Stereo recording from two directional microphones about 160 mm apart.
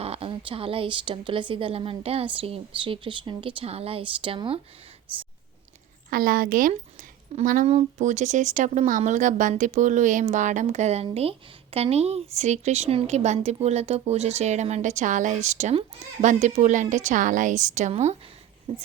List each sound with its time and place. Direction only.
0.0 s speech: 35° right (ahead or behind)
6.1 s a woman's voice: 65° right (ahead or behind)
7.7 s speech: 45° right (ahead or behind)